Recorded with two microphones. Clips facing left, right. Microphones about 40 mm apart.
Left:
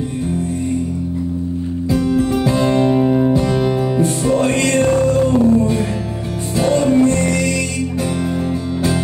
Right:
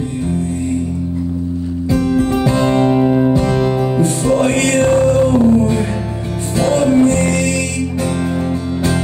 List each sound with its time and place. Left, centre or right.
2.1 s music: right
2.9 s music: centre
3.5 s music: centre
4.4 s music: right
6.9 s music: right